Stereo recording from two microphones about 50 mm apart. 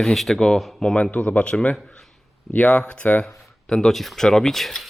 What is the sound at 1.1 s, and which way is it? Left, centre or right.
Speech, left.